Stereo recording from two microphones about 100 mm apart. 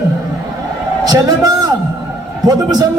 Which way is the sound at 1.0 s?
40° right (ahead or behind).